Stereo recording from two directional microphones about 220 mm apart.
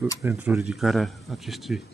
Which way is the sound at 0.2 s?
15° right (ahead or behind).